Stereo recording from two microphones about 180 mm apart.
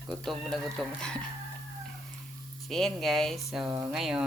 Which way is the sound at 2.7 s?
Centre (ahead or behind).